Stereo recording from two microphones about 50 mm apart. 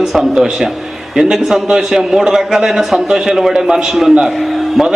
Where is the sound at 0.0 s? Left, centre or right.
Centre.